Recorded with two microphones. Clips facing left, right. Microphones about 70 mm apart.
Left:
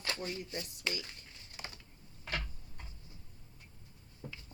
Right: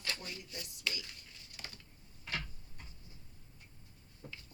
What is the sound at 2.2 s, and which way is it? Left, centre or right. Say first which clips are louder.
Tick-tock: left 2 dB; left.